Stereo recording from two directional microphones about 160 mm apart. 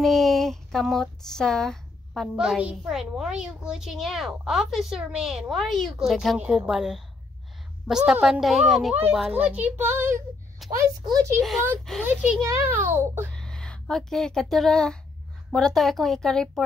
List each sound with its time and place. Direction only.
0.0 s a child's voice: centre (ahead or behind); by 13.3 s 15° right (ahead or behind)
13.3 s speech: 5° left (ahead or behind)